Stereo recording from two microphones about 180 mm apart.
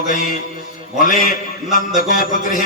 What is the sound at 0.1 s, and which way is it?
Music, 50° left (ahead or behind).